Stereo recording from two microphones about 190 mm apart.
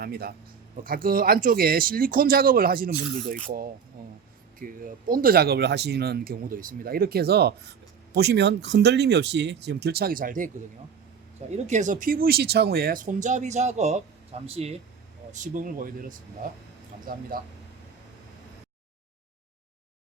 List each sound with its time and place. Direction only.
0.0 s speech: 55° right (ahead or behind)
4.6 s speech: 45° right (ahead or behind)
11.5 s speech: 35° right (ahead or behind)
15.3 s speech: 45° right (ahead or behind)